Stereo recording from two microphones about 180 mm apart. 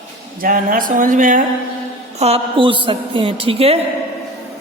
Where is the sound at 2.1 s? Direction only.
35° right (ahead or behind).